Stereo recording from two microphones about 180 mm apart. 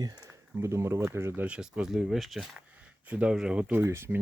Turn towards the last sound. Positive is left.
turn(degrees=-15)  # may be behind; listen again after turning